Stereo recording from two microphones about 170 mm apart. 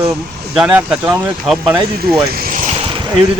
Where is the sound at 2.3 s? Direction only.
55° right (ahead or behind).